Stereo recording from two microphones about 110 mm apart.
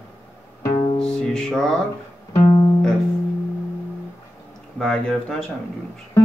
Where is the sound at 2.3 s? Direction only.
40° left (ahead or behind).